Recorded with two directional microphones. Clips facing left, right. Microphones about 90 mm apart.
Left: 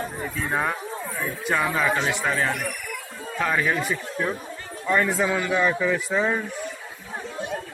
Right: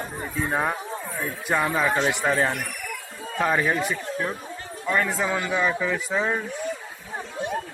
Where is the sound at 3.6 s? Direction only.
Centre (ahead or behind).